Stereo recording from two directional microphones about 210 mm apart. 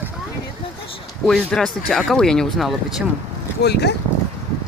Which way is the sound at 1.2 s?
5° left (ahead or behind).